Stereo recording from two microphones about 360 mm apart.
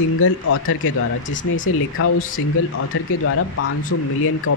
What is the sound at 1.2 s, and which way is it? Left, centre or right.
Speech, left.